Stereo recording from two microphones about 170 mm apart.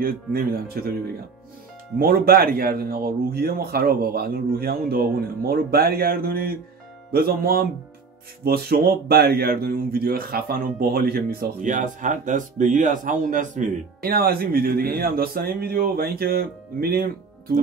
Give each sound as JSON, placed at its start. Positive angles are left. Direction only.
{"t": 0.0, "sound": "speech", "side_deg": -60}
{"t": 2.0, "sound": "speech", "side_deg": -60}